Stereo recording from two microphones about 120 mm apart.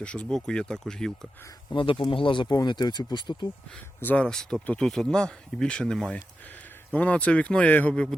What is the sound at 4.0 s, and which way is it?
Speech, 15° left (ahead or behind).